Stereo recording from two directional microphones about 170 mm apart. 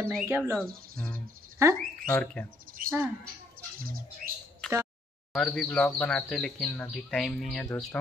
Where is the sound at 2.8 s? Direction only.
55° right (ahead or behind).